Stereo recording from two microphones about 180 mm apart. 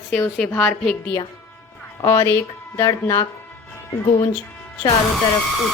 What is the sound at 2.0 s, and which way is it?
A woman's voice, 20° left (ahead or behind).